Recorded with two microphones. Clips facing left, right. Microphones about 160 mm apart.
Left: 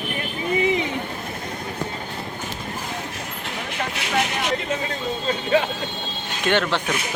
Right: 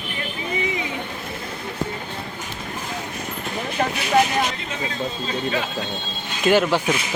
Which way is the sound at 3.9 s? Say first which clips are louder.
Right 6 dB; 75° left (ahead or behind).